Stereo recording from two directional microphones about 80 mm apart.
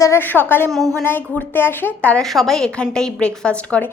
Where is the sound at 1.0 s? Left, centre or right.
Left.